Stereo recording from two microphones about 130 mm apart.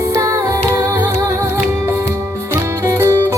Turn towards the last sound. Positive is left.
turn(degrees=-20)  # may be behind; listen again after turning